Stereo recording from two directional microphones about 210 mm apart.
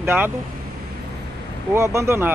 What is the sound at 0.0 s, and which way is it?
Speech, 10° right (ahead or behind).